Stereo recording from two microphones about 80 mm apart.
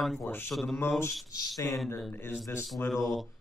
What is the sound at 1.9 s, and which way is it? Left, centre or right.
Speech, left.